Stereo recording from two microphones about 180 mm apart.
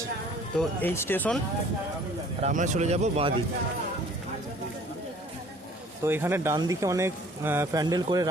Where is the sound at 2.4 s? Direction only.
45° right (ahead or behind).